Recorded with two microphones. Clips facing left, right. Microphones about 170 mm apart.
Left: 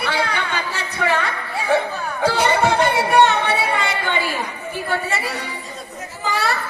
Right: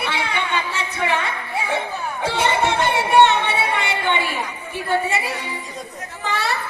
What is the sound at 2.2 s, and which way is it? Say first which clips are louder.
Chatter: left 3 dB; 25° right (ahead or behind).